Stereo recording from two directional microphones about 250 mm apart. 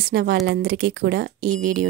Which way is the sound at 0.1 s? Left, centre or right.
Right.